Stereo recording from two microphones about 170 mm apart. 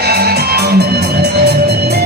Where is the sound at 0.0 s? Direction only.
65° right (ahead or behind).